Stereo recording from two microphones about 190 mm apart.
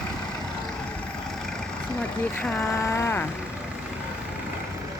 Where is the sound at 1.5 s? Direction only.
5° left (ahead or behind).